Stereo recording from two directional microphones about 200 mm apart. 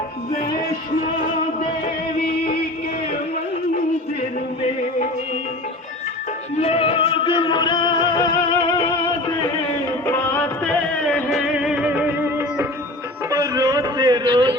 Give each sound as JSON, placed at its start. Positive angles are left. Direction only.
{"t": 1.0, "sound": "music", "side_deg": 25}
{"t": 2.1, "sound": "music", "side_deg": 50}
{"t": 6.6, "sound": "music", "side_deg": 30}
{"t": 10.1, "sound": "music", "side_deg": 10}
{"t": 13.3, "sound": "a sound", "side_deg": -15}